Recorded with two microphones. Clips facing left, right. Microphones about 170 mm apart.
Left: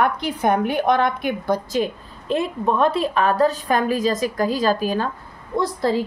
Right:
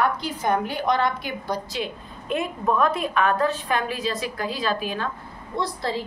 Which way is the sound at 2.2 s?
30° left (ahead or behind).